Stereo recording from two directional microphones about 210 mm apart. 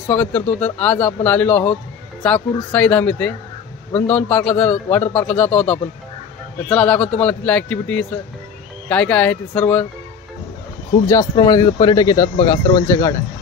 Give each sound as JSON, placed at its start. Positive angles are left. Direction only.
{"t": 0.1, "sound": "a man's voice", "side_deg": 5}
{"t": 11.1, "sound": "speech", "side_deg": 15}